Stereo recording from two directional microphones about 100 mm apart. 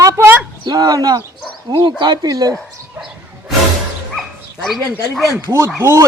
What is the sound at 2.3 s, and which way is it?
Speech, 35° right (ahead or behind).